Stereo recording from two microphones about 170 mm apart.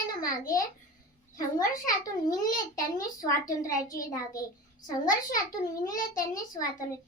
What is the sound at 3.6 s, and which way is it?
A child's voice, 20° left (ahead or behind).